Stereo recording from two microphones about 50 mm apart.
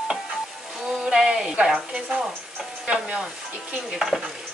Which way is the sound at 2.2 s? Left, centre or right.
Centre.